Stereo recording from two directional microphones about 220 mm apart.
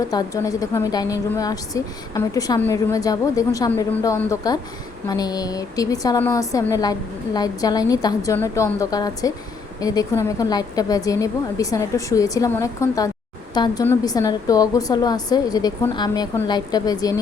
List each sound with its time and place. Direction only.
0.1 s a woman's voice: 15° left (ahead or behind)